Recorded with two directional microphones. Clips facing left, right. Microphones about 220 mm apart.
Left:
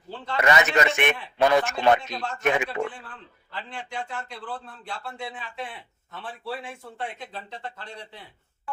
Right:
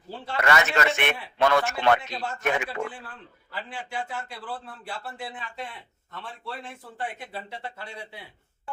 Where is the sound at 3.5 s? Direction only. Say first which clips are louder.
Even; 5° right (ahead or behind).